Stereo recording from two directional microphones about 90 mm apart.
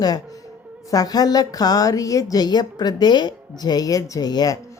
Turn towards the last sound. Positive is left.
turn(degrees=50)  # may be behind; listen again after turning